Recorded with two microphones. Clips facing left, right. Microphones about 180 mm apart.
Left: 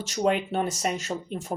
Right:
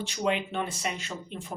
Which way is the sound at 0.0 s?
40° left (ahead or behind).